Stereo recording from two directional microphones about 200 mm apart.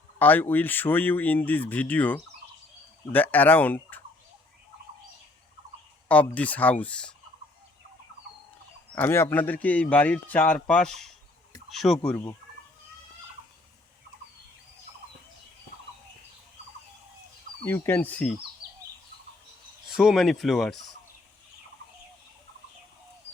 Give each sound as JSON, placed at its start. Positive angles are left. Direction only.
{"t": 0.2, "sound": "speech", "side_deg": 10}
{"t": 6.1, "sound": "speech", "side_deg": 5}
{"t": 9.0, "sound": "speech", "side_deg": 10}
{"t": 17.7, "sound": "speech", "side_deg": 10}
{"t": 18.6, "sound": "bird", "side_deg": -25}
{"t": 19.9, "sound": "speech", "side_deg": -5}